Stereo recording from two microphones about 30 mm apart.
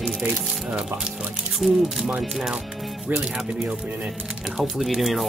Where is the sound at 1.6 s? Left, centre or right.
Centre.